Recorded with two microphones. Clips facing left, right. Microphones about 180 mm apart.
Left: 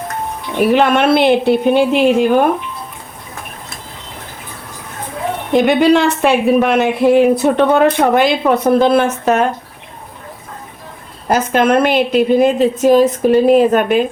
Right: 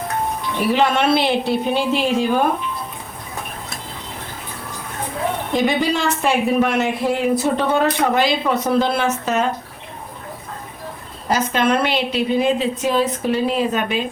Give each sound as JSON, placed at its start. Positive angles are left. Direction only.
{"t": 0.6, "sound": "speech", "side_deg": 55}
{"t": 5.5, "sound": "speech", "side_deg": 65}
{"t": 11.3, "sound": "a woman's voice", "side_deg": 50}